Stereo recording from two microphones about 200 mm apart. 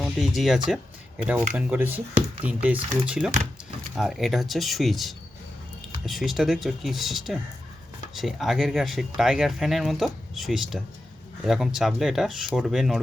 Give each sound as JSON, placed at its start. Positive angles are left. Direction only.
{"t": 0.0, "sound": "speech", "side_deg": 0}